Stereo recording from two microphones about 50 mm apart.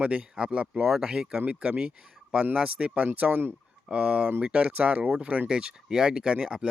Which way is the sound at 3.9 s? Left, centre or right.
Right.